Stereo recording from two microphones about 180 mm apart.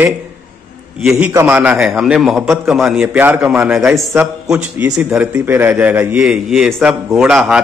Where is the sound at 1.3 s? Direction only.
10° right (ahead or behind).